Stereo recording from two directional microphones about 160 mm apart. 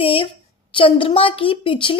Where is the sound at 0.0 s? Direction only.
35° left (ahead or behind).